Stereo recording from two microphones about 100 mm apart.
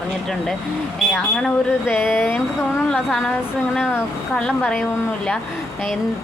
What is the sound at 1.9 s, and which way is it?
Speech, 20° left (ahead or behind).